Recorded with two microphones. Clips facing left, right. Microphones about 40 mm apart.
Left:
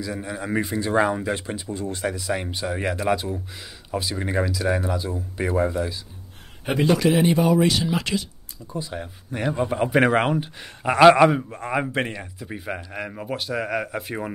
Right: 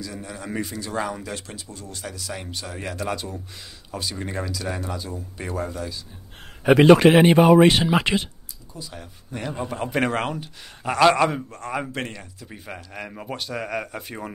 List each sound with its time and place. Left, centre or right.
0.0 s speech: centre
7.0 s speech: right
8.7 s speech: left
12.5 s speech: centre